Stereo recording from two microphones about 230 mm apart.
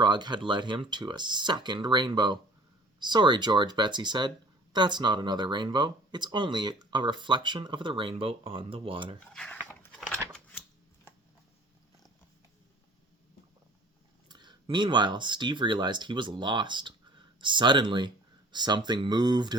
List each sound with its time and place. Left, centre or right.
0.0 s speech: centre
9.2 s speech: centre
14.3 s speech: centre